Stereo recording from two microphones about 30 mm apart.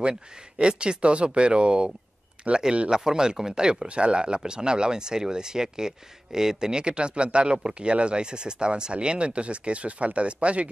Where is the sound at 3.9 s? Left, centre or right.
Right.